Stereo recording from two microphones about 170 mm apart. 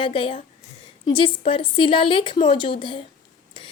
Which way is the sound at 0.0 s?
30° left (ahead or behind).